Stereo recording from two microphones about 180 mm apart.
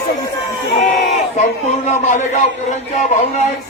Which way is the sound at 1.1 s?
40° left (ahead or behind).